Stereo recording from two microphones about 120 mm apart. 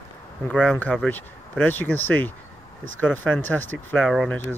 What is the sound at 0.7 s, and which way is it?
Speech, 10° left (ahead or behind).